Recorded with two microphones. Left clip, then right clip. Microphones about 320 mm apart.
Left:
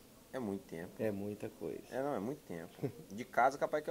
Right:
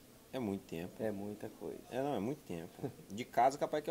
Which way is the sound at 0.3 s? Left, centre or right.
Right.